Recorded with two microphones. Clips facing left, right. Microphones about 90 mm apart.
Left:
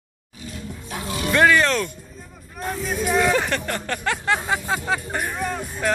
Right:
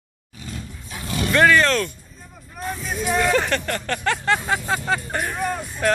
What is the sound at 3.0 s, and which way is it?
Speech, 5° left (ahead or behind).